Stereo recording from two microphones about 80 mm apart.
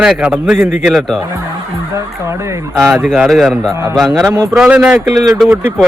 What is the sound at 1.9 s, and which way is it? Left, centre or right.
Speech, right.